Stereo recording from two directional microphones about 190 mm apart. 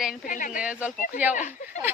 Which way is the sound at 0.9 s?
45° left (ahead or behind).